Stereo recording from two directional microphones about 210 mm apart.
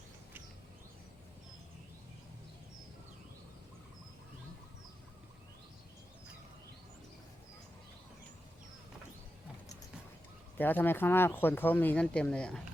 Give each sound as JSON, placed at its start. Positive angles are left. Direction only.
{"t": 10.6, "sound": "speech", "side_deg": 10}